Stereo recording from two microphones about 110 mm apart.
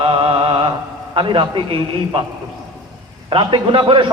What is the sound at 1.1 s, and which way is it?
A man's voice, 50° right (ahead or behind).